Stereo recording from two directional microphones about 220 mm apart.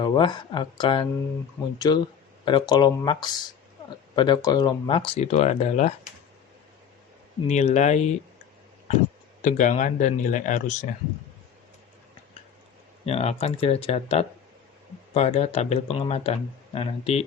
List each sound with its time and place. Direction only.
0.0 s speech: 20° left (ahead or behind)
7.4 s speech: 30° left (ahead or behind)
9.4 s speech: 35° left (ahead or behind)
13.1 s speech: 30° left (ahead or behind)